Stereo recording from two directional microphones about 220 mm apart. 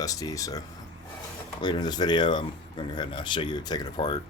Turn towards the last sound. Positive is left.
turn(degrees=20)  # may be behind; listen again after turning